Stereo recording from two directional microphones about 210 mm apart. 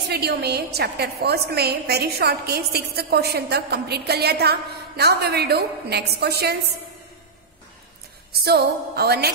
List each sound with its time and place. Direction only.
0.1 s a woman's voice: 50° right (ahead or behind)
8.3 s a woman's voice: 50° right (ahead or behind)